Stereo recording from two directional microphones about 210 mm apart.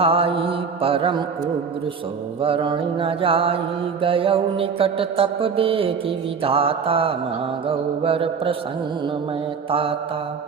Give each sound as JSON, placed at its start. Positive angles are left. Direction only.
{"t": 0.0, "sound": "mantra", "side_deg": -25}
{"t": 2.4, "sound": "mantra", "side_deg": -25}
{"t": 9.6, "sound": "mantra", "side_deg": -25}